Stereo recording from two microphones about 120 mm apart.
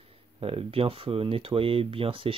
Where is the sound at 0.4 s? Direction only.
50° right (ahead or behind).